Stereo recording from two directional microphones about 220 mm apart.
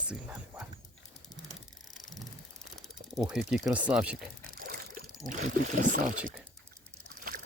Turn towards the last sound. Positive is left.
turn(degrees=-40)  # may be behind; listen again after turning